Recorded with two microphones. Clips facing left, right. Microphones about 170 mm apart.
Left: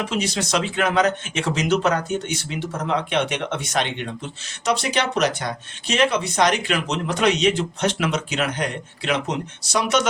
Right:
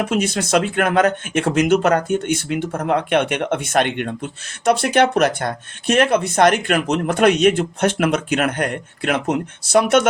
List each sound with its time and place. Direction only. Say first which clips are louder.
0.0 s speech: right 4 dB; 50° right (ahead or behind)